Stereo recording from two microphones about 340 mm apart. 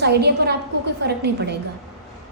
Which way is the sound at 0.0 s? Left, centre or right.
Right.